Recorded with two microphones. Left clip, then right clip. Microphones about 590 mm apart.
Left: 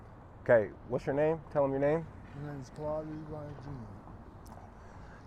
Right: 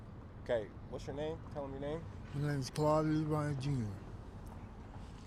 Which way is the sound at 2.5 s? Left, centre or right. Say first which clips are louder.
Right 6 dB; right.